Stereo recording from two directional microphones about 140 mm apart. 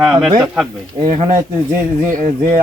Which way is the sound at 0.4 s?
5° right (ahead or behind).